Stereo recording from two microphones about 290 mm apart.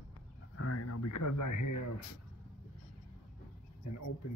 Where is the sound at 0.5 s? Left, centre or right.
Left.